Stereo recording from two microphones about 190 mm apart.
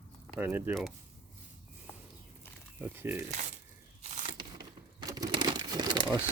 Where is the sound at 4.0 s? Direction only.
35° right (ahead or behind).